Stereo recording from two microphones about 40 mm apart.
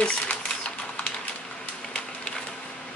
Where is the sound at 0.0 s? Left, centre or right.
Left.